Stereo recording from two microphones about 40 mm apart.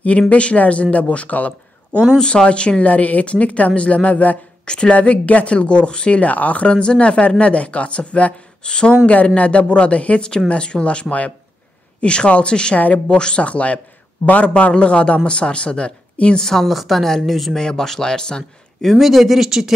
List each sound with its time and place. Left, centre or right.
0.3 s speech: left
2.1 s a man's voice: left
2.9 s speech: left
4.6 s a man's voice: left
4.9 s speech: left
6.2 s speech: left
8.6 s a man's voice: left
9.0 s a man's voice: left
12.7 s speech: left
13.1 s a man's voice: left
16.6 s a woman's voice: centre
17.6 s speech: centre
18.9 s a woman's voice: centre